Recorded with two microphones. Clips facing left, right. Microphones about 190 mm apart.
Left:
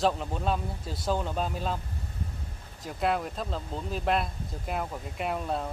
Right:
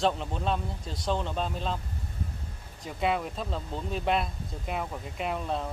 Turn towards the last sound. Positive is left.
turn(degrees=5)  # may be behind; listen again after turning